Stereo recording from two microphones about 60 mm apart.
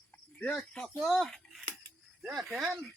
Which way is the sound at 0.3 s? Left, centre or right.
Left.